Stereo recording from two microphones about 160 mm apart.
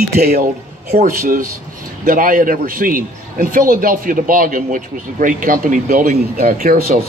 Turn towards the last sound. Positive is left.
turn(degrees=-60)  # may be behind; listen again after turning